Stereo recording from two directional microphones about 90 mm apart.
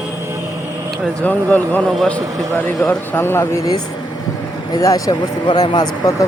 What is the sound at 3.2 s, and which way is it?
Speech, 30° left (ahead or behind).